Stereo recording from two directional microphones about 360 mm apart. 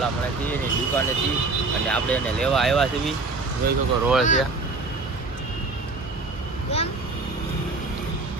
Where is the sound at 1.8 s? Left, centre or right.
Centre.